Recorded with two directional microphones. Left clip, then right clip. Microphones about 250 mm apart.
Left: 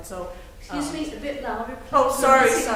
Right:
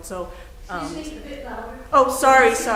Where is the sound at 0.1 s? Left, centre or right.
Right.